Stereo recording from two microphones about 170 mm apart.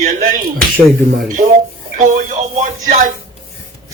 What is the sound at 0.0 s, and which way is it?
Speech, 55° right (ahead or behind).